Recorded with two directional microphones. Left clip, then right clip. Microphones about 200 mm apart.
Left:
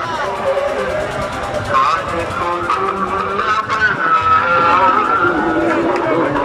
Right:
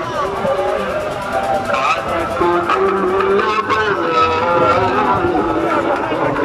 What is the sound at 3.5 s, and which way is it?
Music, 55° right (ahead or behind).